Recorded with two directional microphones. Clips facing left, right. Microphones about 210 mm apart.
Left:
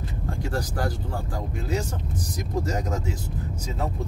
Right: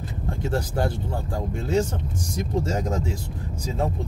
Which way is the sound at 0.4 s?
25° right (ahead or behind).